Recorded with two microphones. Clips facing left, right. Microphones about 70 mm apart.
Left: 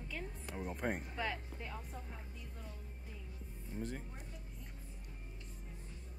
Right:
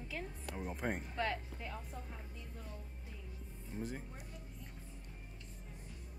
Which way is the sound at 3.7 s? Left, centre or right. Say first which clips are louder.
Even; centre.